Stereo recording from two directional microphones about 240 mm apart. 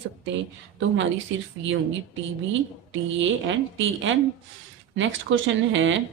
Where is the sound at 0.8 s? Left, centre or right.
Right.